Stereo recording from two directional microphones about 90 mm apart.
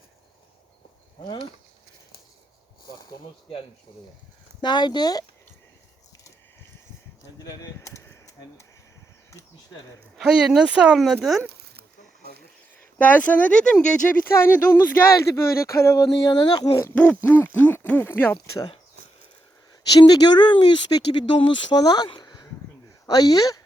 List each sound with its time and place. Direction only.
4.6 s speech: 55° left (ahead or behind)
7.8 s a sound: 35° left (ahead or behind)
10.2 s speech: 5° right (ahead or behind)
13.0 s speech: 20° left (ahead or behind)
14.3 s speech: 30° left (ahead or behind)
16.3 s speech: 55° left (ahead or behind)
16.9 s speech: 15° left (ahead or behind)
17.2 s a sound: 25° left (ahead or behind)
20.0 s speech: 50° left (ahead or behind)
22.2 s a sound: 50° left (ahead or behind)
23.0 s speech: 45° left (ahead or behind)